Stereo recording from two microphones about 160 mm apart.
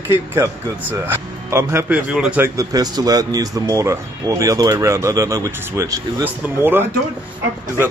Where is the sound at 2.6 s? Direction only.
25° right (ahead or behind).